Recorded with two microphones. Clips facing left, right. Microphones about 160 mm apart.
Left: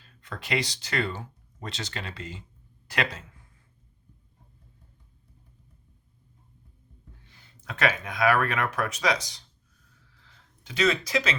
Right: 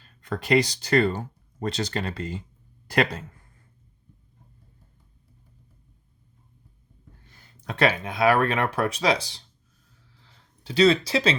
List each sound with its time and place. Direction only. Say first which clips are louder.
0.2 s speech: right 8 dB; 40° right (ahead or behind)
7.3 s speech: right 5 dB; 40° right (ahead or behind)
10.2 s a sound: right 1 dB; 30° right (ahead or behind)